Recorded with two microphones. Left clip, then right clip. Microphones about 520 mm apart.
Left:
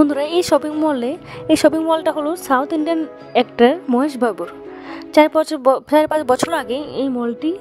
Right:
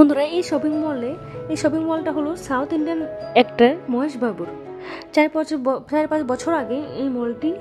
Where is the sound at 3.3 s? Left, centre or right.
Centre.